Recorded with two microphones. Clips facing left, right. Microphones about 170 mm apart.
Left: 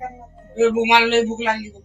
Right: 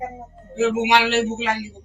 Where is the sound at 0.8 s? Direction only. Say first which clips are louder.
Left 3 dB; 10° left (ahead or behind).